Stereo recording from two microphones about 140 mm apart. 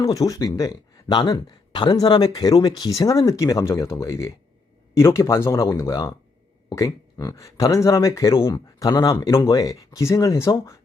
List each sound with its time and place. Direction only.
0.0 s speech: 25° left (ahead or behind)